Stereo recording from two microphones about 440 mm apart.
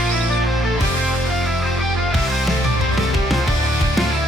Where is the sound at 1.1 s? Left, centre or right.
Centre.